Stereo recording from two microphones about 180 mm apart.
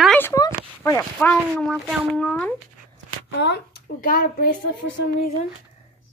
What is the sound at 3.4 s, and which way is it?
Speech, 65° left (ahead or behind).